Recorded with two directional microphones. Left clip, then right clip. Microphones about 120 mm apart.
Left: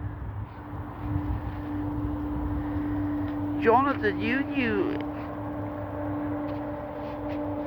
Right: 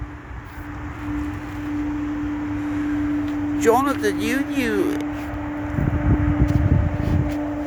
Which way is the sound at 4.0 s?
65° right (ahead or behind).